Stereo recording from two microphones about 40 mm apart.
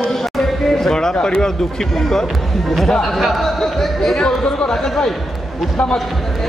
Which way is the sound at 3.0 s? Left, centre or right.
Centre.